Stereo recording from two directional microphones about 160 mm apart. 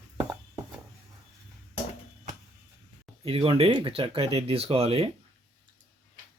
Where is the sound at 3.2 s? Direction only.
35° right (ahead or behind).